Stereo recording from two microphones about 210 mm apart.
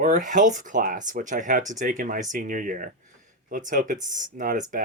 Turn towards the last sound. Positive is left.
turn(degrees=-35)  # may be behind; listen again after turning